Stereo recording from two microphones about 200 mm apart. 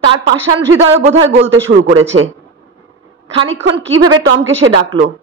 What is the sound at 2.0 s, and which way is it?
Speech, 80° right.